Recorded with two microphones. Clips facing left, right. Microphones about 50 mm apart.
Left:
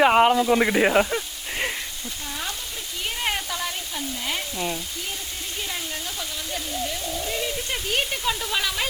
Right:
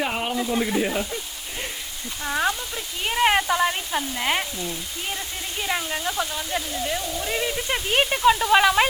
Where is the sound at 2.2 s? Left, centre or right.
Right.